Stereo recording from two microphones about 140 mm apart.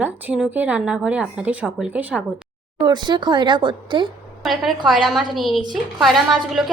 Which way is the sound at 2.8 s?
30° right (ahead or behind).